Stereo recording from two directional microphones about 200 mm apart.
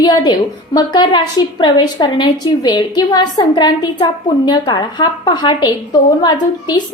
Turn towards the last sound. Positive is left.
turn(degrees=20)  # may be behind; listen again after turning